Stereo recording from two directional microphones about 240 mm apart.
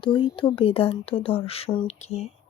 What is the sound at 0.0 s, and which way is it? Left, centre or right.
Speech, left.